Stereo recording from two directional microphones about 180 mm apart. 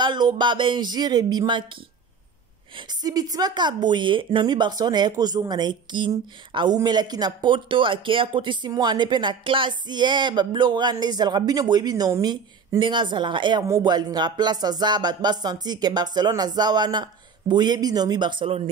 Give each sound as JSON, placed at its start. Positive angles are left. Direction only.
{"t": 0.0, "sound": "a woman's voice", "side_deg": -25}
{"t": 2.9, "sound": "a woman's voice", "side_deg": -20}